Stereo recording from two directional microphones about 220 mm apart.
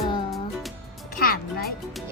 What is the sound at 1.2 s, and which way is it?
Music, 45° left (ahead or behind).